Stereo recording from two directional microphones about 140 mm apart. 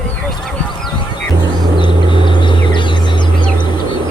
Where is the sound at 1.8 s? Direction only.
35° left (ahead or behind).